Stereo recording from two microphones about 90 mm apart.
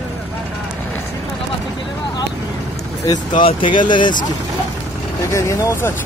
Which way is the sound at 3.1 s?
65° left (ahead or behind).